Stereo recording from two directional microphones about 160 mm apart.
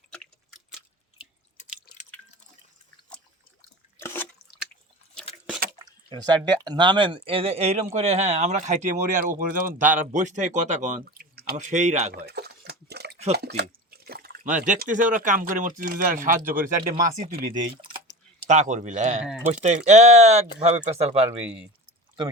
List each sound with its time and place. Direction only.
1.6 s drip: 50° left (ahead or behind)
4.0 s drip: 15° left (ahead or behind)
5.8 s speech: 25° right (ahead or behind); by 11.0 s 50° right (ahead or behind)
11.2 s drip: 75° right (ahead or behind)
11.5 s speech: 50° right (ahead or behind)
12.1 s a sound: 90° right
13.6 s water: 75° right (ahead or behind); by 14.8 s 50° right (ahead or behind)
14.8 s speech: 55° right (ahead or behind)
17.7 s a sound: 30° right (ahead or behind)
18.4 s speech: 50° right (ahead or behind)
19.2 s speech: 5° right (ahead or behind)
19.6 s speech: 45° right (ahead or behind)
21.2 s speech: 10° right (ahead or behind)